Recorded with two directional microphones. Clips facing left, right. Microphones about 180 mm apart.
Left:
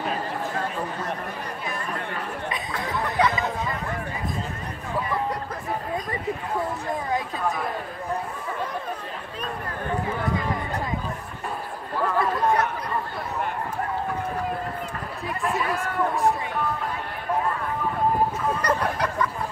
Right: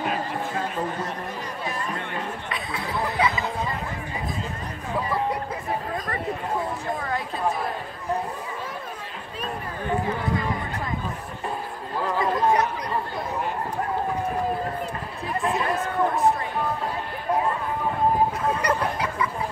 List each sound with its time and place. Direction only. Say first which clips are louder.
2.7 s chatter: right 2 dB; 5° right (ahead or behind)
12.2 s a sound: right 2 dB; 15° right (ahead or behind)
15.5 s speech: right 1 dB; 25° right (ahead or behind)
18.6 s fowl: even; 10° right (ahead or behind)